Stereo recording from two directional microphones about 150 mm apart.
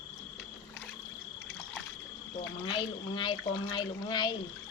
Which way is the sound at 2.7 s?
35° left (ahead or behind).